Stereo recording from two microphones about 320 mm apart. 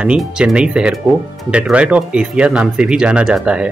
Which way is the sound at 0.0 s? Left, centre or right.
Centre.